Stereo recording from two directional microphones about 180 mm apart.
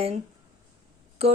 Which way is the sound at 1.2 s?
35° right (ahead or behind).